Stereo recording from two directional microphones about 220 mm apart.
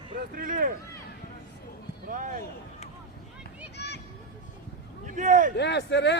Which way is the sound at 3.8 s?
50° left (ahead or behind).